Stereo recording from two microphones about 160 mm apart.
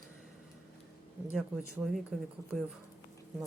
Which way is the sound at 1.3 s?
5° right (ahead or behind).